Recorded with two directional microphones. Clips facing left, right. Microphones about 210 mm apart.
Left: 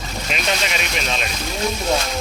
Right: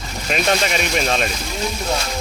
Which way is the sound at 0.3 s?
45° right (ahead or behind).